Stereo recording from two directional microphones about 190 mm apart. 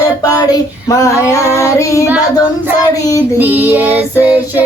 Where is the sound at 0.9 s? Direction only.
15° left (ahead or behind).